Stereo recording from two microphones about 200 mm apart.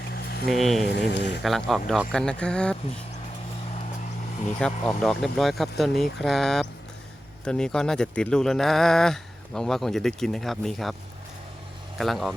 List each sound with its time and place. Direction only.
0.1 s a sound: 50° left (ahead or behind)
0.5 s speech: centre (ahead or behind)
0.9 s speech: 60° left (ahead or behind)
1.4 s speech: centre (ahead or behind)
4.6 s speech: centre (ahead or behind)
11.9 s speech: centre (ahead or behind)